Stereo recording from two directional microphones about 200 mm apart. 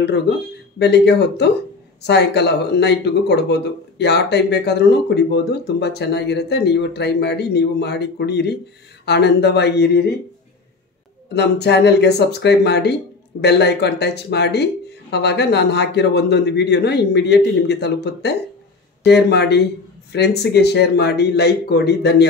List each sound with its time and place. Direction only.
0.7 s speech: 55° left (ahead or behind)
11.3 s speech: 55° left (ahead or behind)